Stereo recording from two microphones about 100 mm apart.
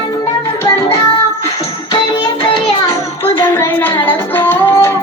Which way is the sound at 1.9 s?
50° left (ahead or behind).